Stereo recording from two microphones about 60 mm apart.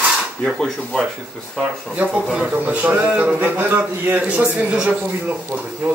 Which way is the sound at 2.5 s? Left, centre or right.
Right.